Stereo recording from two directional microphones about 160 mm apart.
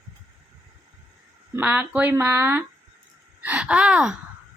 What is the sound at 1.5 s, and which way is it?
Speech, 10° right (ahead or behind).